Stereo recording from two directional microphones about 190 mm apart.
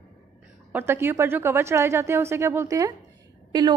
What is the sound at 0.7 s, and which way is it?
A woman's voice, 10° right (ahead or behind).